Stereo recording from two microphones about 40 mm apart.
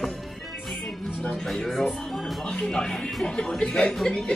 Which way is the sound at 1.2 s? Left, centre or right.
Centre.